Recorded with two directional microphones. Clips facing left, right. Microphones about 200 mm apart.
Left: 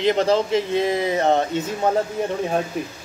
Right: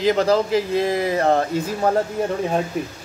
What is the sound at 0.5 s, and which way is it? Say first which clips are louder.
Speech: right 1 dB; 25° left (ahead or behind).